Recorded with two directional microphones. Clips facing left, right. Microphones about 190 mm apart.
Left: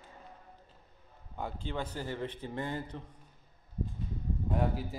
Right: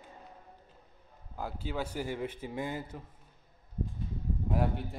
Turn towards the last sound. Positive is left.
turn(degrees=0)  # may be behind; listen again after turning